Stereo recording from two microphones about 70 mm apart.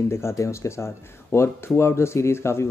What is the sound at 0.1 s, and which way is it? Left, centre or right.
Speech, left.